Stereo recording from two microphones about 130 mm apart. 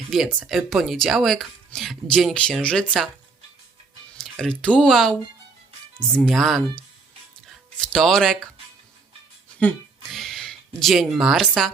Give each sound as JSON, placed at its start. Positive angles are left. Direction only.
{"t": 0.1, "sound": "speech", "side_deg": 0}
{"t": 4.2, "sound": "speech", "side_deg": 5}
{"t": 7.4, "sound": "music", "side_deg": 5}
{"t": 10.1, "sound": "a sound", "side_deg": 0}